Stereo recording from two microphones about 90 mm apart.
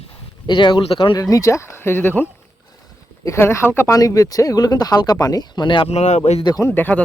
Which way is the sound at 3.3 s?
30° left (ahead or behind).